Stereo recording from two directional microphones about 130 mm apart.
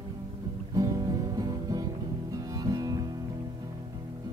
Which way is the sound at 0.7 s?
30° right (ahead or behind).